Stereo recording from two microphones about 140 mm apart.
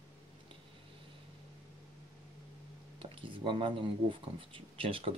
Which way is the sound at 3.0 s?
40° right (ahead or behind).